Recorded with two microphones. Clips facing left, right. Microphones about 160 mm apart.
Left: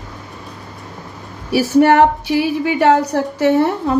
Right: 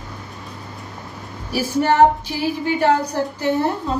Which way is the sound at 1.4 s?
70° left (ahead or behind).